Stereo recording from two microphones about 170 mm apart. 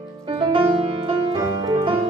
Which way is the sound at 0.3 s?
30° right (ahead or behind).